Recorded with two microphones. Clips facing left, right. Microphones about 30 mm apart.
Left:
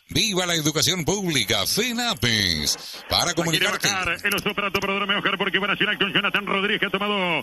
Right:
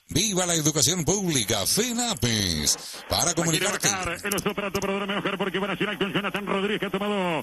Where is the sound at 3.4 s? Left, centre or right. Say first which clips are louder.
Left 3 dB; centre.